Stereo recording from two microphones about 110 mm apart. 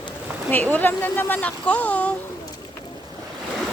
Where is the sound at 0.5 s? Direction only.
15° left (ahead or behind).